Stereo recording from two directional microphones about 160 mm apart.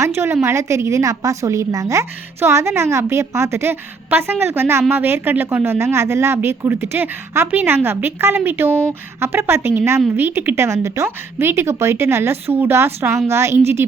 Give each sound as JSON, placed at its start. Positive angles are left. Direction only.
{"t": 0.4, "sound": "a woman's voice", "side_deg": -15}